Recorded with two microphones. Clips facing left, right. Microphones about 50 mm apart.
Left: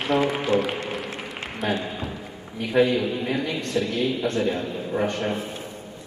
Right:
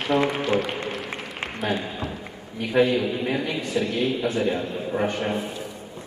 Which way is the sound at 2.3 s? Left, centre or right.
Centre.